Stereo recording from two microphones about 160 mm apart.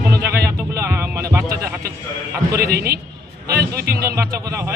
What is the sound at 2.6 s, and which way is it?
Speech, 75° right (ahead or behind).